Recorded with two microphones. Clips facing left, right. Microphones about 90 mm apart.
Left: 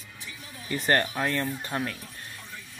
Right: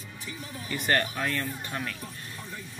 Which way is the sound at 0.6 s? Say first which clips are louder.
Left 2 dB; 30° left (ahead or behind).